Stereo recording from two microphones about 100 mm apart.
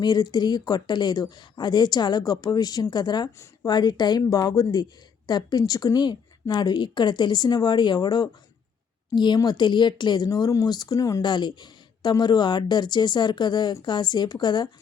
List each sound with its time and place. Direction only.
0.0 s speech: 45° left (ahead or behind)
10.2 s speech: 40° left (ahead or behind)
11.2 s speech: 45° left (ahead or behind)